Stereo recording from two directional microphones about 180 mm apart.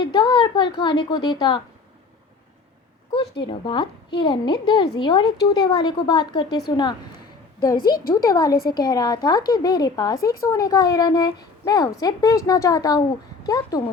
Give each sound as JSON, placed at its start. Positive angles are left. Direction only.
{"t": 0.0, "sound": "a woman's voice", "side_deg": 25}
{"t": 3.1, "sound": "a woman's voice", "side_deg": 25}
{"t": 7.8, "sound": "a woman's voice", "side_deg": 55}
{"t": 8.1, "sound": "a woman's voice", "side_deg": 20}